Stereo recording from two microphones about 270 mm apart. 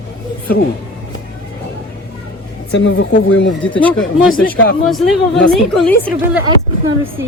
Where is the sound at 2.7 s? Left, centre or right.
Left.